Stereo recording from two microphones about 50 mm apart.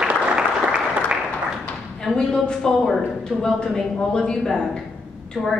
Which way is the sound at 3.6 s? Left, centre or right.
Centre.